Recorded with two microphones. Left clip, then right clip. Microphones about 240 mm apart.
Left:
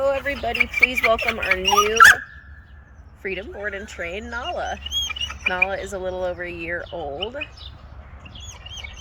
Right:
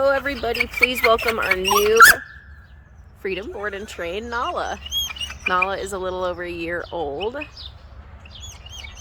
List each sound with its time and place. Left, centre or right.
0.0 s speech: centre
3.7 s speech: centre
6.9 s speech: right